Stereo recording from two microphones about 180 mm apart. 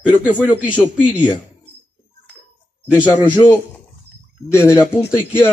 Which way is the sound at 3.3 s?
10° left (ahead or behind).